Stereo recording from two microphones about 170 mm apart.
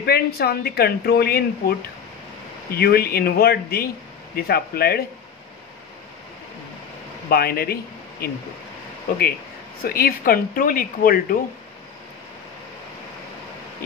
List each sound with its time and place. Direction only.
0.0 s speech: 65° left (ahead or behind)
7.2 s speech: 65° left (ahead or behind)
9.8 s speech: 60° left (ahead or behind)